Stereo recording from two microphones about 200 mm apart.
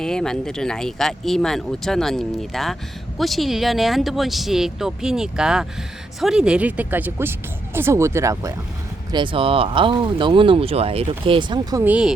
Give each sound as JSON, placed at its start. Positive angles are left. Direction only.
{"t": 0.0, "sound": "speech", "side_deg": 5}
{"t": 11.9, "sound": "speech", "side_deg": -5}